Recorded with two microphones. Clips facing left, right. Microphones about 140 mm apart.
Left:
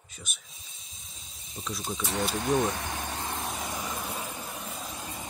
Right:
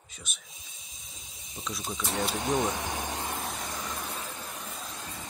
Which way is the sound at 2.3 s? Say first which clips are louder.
Left 3 dB; 20° right (ahead or behind).